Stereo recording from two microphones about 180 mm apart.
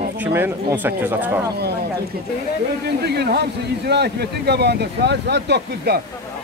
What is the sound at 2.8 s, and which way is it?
A man's voice, 65° right (ahead or behind).